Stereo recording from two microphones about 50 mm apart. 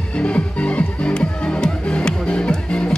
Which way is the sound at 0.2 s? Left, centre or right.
Left.